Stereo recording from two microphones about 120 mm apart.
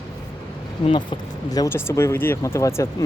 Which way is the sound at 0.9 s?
40° left (ahead or behind).